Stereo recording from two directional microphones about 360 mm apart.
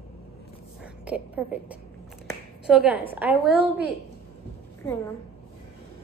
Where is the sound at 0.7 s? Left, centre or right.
Centre.